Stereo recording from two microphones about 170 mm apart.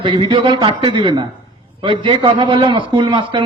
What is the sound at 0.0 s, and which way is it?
A man's voice, 30° right (ahead or behind).